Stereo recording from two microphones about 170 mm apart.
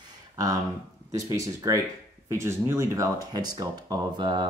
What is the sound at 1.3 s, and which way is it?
Speech, 20° right (ahead or behind).